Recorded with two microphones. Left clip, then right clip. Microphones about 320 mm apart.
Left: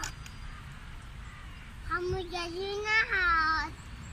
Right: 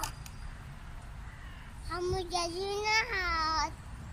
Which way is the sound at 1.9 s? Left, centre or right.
Centre.